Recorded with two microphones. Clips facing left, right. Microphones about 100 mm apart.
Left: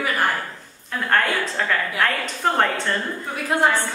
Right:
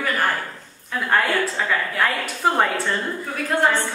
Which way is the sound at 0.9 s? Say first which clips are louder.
Even; 5° right (ahead or behind).